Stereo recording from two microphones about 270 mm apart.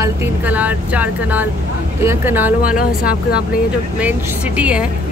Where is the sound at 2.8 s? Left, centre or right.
Left.